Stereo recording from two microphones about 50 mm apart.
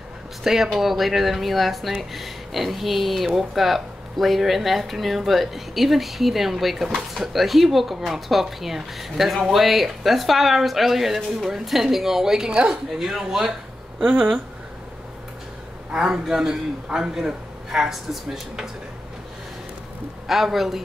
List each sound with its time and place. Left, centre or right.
0.4 s speech: centre
12.4 s speech: centre
13.0 s a man's voice: centre
14.0 s speech: centre
15.9 s a man's voice: centre
20.2 s speech: centre